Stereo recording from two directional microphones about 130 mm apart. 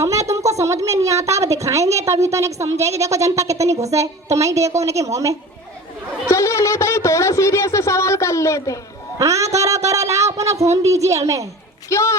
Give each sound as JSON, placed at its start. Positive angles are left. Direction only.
{"t": 0.5, "sound": "speech", "side_deg": -25}
{"t": 6.2, "sound": "speech", "side_deg": 20}
{"t": 9.1, "sound": "speech", "side_deg": -25}
{"t": 11.9, "sound": "speech", "side_deg": 20}